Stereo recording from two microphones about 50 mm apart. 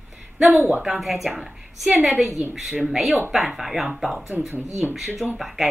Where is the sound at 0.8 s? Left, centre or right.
Centre.